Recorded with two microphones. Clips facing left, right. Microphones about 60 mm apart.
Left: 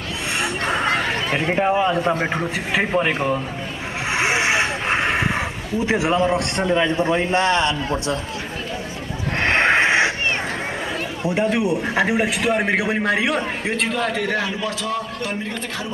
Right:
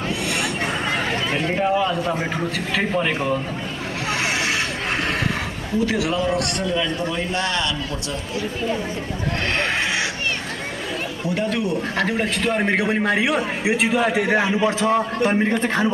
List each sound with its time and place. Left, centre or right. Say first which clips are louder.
0.4 s a sound: left 2 dB; left
2.3 s a man's voice: left 2 dB; centre
4.2 s a sound: left 5 dB; left
5.9 s a man's voice: left 6 dB; left
9.4 s neigh: left 7 dB; left
11.2 s a man's voice: left 4 dB; centre; by 15.9 s right